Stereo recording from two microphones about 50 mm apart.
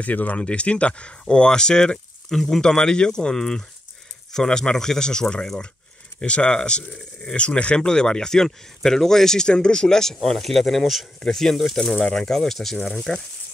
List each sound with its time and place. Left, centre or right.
0.0 s speech: left; by 13.2 s centre